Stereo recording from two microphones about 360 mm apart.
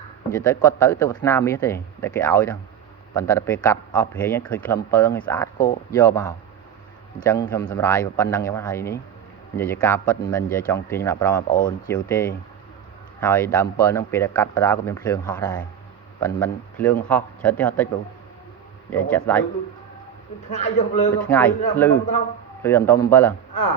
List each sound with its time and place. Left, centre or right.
0.3 s speech: centre
11.4 s a man's voice: left
11.9 s speech: centre
18.9 s speech: centre
20.5 s a man's voice: centre
21.2 s speech: centre